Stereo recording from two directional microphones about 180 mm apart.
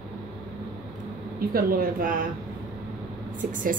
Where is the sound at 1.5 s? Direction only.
55° right (ahead or behind).